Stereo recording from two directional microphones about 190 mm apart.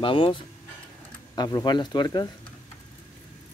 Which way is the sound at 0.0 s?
25° left (ahead or behind).